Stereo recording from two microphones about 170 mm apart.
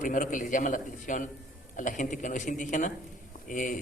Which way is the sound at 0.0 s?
50° left (ahead or behind).